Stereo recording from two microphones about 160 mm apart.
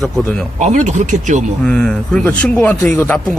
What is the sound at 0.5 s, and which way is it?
Speech, 50° right (ahead or behind).